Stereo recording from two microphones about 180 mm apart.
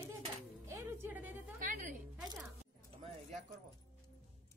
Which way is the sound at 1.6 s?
45° right (ahead or behind).